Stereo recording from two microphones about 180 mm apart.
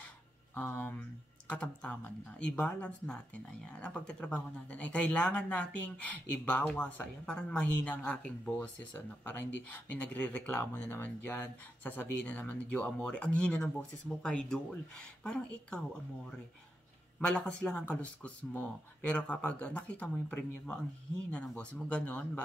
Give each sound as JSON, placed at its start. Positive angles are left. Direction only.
{"t": 0.6, "sound": "speech", "side_deg": 10}
{"t": 17.2, "sound": "speech", "side_deg": 5}